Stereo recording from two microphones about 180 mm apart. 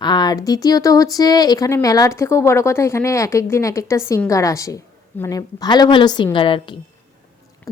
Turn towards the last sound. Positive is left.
turn(degrees=25)  # may be behind; listen again after turning